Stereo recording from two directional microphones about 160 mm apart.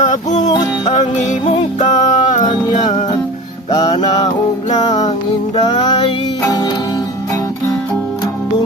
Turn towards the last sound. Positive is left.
turn(degrees=25)  # may be behind; listen again after turning